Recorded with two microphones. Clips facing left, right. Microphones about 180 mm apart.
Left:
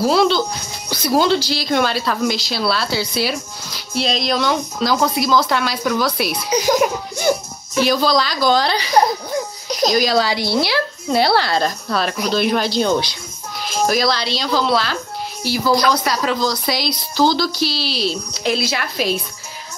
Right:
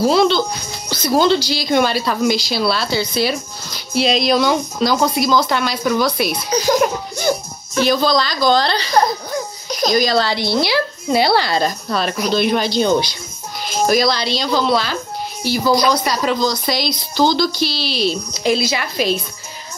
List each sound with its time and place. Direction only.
0.0 s speech: 5° left (ahead or behind)
9.7 s music: 35° left (ahead or behind)
9.9 s speech: 10° left (ahead or behind)